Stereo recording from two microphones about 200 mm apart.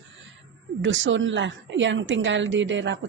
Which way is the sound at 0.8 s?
70° right (ahead or behind).